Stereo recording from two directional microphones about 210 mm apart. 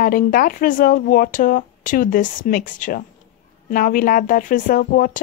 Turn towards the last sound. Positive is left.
turn(degrees=40)  # may be behind; listen again after turning